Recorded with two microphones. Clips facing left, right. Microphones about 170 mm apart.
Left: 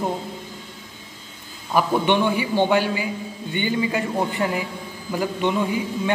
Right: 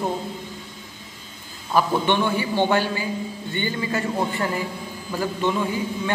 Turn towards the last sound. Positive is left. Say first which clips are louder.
# left 2 dB
turn(degrees=15)  # may be behind; listen again after turning